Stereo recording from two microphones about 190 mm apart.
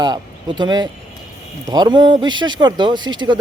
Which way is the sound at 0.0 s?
25° right (ahead or behind).